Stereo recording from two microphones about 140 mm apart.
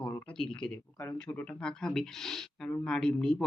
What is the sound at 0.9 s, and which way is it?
Speech, 20° left (ahead or behind).